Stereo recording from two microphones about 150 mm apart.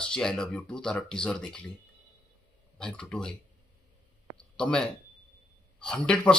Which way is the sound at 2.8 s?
5° left (ahead or behind).